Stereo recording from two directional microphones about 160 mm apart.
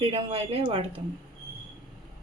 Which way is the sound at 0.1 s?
35° right (ahead or behind).